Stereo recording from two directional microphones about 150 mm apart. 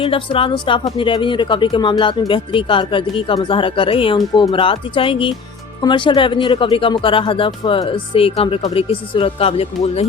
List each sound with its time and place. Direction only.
0.0 s speech: 35° left (ahead or behind)